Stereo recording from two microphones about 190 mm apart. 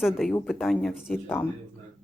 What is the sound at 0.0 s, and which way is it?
Speech, centre (ahead or behind).